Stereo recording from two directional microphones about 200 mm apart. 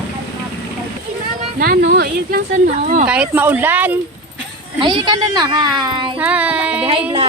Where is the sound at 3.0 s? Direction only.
5° right (ahead or behind).